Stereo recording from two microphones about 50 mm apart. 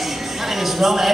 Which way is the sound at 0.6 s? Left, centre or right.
Centre.